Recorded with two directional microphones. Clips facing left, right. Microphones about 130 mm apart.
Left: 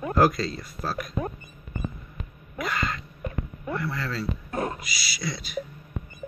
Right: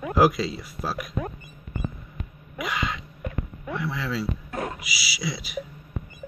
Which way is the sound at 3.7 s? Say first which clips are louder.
Right 1 dB; centre (ahead or behind).